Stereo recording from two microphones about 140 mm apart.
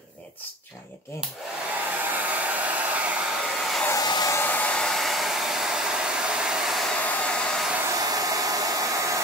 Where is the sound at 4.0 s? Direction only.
30° left (ahead or behind).